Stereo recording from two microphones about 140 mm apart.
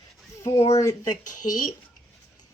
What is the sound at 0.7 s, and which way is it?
Speech, 25° left (ahead or behind).